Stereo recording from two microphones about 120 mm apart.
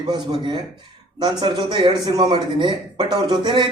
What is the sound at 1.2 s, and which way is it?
A man's voice, 40° right (ahead or behind).